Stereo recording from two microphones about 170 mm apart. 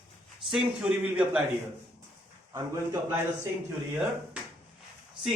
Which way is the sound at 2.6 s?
15° right (ahead or behind).